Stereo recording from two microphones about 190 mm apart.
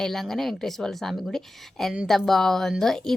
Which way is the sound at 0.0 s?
Centre (ahead or behind).